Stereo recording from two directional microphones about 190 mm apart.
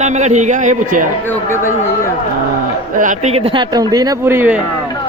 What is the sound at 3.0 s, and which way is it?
Speech, 40° right (ahead or behind).